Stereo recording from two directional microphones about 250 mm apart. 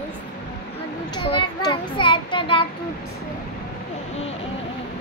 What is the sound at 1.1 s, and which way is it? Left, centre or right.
Child singing, centre.